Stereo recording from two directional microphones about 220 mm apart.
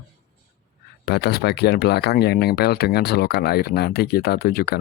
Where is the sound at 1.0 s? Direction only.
45° left (ahead or behind).